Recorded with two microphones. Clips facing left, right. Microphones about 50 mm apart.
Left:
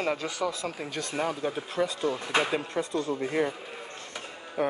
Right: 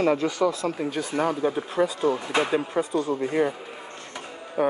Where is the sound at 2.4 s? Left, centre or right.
Centre.